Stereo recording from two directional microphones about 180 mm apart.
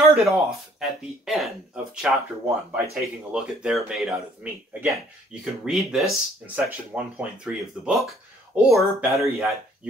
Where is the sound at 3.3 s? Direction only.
5° right (ahead or behind).